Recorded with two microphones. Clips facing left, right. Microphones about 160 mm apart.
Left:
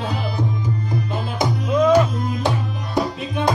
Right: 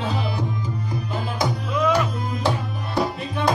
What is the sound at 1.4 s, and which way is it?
Music, 20° left (ahead or behind).